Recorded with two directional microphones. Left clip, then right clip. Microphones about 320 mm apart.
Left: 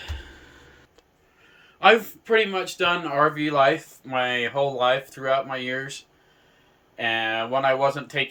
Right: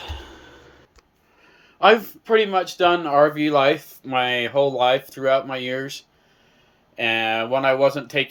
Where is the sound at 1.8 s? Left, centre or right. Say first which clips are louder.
Right 2 dB; centre.